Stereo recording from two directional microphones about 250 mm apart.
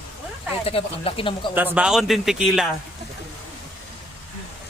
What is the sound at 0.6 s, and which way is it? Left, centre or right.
Speech, left.